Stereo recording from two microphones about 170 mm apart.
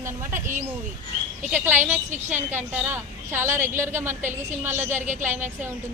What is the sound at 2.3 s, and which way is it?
A woman's voice, 10° right (ahead or behind).